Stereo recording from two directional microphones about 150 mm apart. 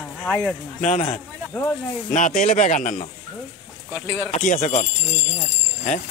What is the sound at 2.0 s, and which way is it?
Speech, 60° left (ahead or behind).